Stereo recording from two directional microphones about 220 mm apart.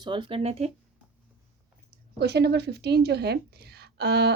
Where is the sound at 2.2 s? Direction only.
50° right (ahead or behind).